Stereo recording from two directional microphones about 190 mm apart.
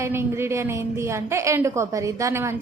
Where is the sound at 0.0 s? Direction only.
15° right (ahead or behind).